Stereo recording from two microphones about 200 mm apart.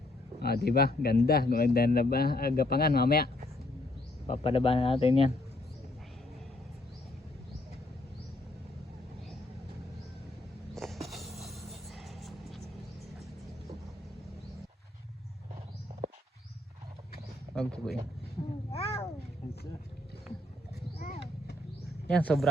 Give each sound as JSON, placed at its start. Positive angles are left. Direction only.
{"t": 0.3, "sound": "speech", "side_deg": 50}
{"t": 4.3, "sound": "speech", "side_deg": 30}
{"t": 10.8, "sound": "music", "side_deg": 0}
{"t": 17.5, "sound": "a sound", "side_deg": 0}
{"t": 18.7, "sound": "a sound", "side_deg": 30}
{"t": 22.1, "sound": "speech", "side_deg": 5}